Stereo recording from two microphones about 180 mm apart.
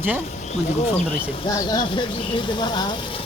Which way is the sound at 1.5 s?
25° left (ahead or behind).